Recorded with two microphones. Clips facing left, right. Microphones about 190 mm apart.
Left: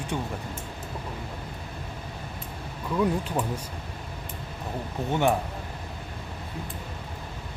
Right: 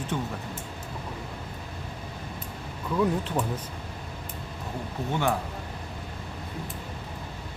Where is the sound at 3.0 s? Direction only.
10° left (ahead or behind).